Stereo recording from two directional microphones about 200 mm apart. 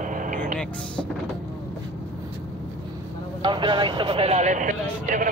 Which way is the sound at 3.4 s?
25° right (ahead or behind).